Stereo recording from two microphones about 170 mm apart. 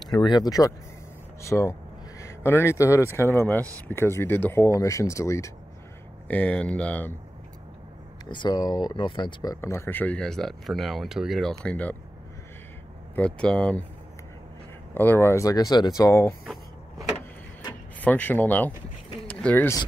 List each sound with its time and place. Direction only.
0.0 s speech: 25° left (ahead or behind); by 7.2 s 10° left (ahead or behind)
8.3 s speech: 25° left (ahead or behind); by 12.0 s 10° left (ahead or behind)
13.1 s speech: 5° left (ahead or behind)
15.0 s speech: 15° left (ahead or behind)
18.0 s speech: 10° left (ahead or behind)